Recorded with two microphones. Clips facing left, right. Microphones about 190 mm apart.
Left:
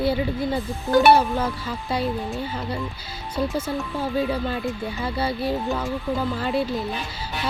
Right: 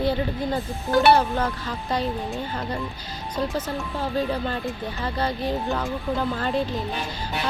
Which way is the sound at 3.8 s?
5° left (ahead or behind).